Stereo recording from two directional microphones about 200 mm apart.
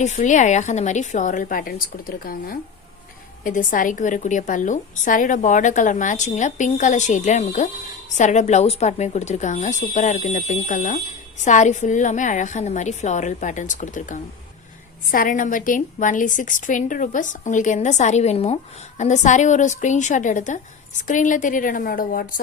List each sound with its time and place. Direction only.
0.0 s a woman's voice: 35° left (ahead or behind)